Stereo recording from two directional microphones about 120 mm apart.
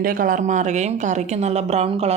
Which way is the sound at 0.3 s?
90° right.